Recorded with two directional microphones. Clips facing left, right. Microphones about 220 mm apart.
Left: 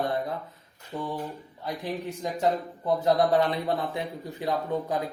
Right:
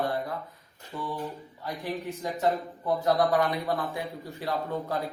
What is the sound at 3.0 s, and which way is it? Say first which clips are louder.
A man's voice: left 2 dB; 25° left (ahead or behind).